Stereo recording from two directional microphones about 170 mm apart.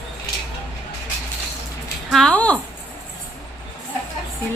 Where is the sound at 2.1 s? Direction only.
5° left (ahead or behind).